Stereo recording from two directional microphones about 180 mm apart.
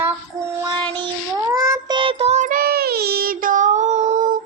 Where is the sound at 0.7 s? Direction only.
25° right (ahead or behind).